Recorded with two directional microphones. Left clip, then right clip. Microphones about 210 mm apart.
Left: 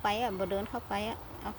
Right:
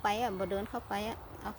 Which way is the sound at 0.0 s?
10° right (ahead or behind).